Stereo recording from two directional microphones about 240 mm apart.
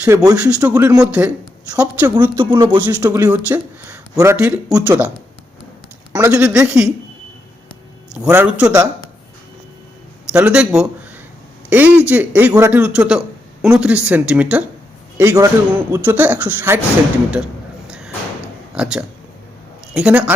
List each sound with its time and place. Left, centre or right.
0.0 s speech: centre
2.3 s speech: centre
2.8 s speech: centre
6.1 s speech: centre
8.1 s speech: centre
10.3 s speech: centre
17.3 s a sound: centre
18.7 s speech: centre